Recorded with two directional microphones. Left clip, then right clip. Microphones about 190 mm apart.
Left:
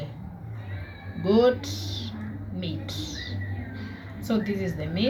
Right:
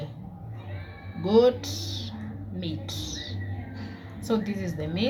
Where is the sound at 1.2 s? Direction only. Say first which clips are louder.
Right 1 dB; 20° right (ahead or behind).